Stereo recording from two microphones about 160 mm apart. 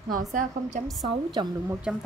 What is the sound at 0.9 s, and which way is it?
Speech, centre (ahead or behind).